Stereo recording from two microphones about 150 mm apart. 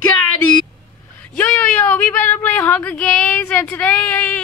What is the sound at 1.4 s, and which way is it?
Speech, 10° left (ahead or behind).